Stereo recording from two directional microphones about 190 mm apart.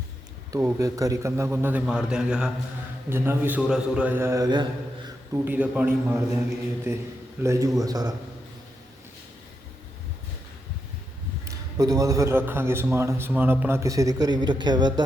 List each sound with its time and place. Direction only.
0.5 s a man's voice: 15° right (ahead or behind)
11.4 s a man's voice: 20° right (ahead or behind)